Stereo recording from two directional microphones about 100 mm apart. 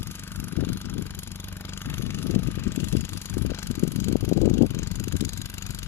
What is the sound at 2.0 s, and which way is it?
Vehicle, 25° left (ahead or behind).